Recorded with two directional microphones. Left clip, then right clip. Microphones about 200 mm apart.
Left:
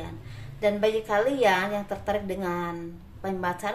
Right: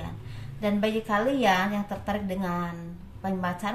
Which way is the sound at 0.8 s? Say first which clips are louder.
Even; 40° left (ahead or behind).